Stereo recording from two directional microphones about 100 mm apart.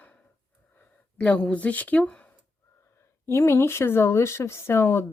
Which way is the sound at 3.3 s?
25° left (ahead or behind).